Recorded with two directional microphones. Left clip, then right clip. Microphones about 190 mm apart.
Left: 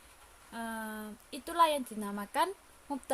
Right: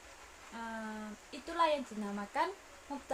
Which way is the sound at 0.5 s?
55° left (ahead or behind).